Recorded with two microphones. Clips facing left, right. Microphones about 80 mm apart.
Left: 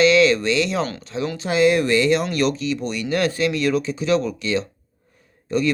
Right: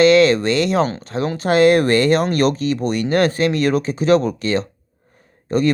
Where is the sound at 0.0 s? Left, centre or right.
Right.